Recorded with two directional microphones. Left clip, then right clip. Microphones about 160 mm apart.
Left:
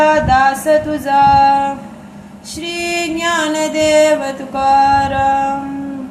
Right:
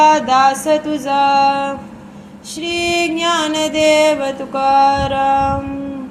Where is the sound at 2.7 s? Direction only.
25° right (ahead or behind).